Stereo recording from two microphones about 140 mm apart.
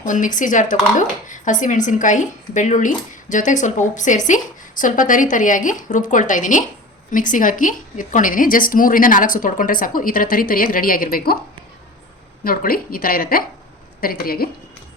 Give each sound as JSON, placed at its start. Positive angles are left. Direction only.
{"t": 0.0, "sound": "a woman's voice", "side_deg": 65}
{"t": 12.5, "sound": "speech", "side_deg": 90}